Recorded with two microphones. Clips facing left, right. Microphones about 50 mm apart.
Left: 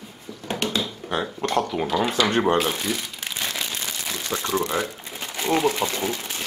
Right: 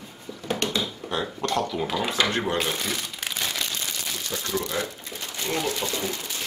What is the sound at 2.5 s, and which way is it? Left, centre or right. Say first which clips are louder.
Speech: left 4 dB; centre.